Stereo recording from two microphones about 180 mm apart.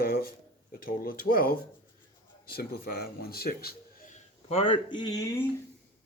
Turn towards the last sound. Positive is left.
turn(degrees=20)  # may be behind; listen again after turning